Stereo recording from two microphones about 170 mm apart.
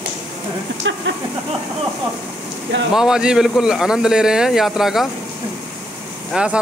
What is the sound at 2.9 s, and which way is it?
A man's voice, 5° right (ahead or behind).